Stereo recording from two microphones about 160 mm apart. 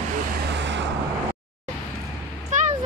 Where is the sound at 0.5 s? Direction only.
90° right.